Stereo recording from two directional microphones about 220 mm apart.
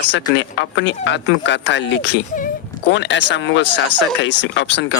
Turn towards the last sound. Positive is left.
turn(degrees=55)  # may be behind; listen again after turning